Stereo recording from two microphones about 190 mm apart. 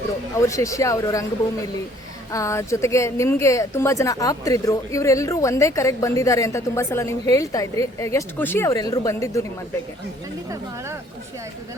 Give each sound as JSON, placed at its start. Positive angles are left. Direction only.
{"t": 0.3, "sound": "speech", "side_deg": 15}
{"t": 2.3, "sound": "speech", "side_deg": 15}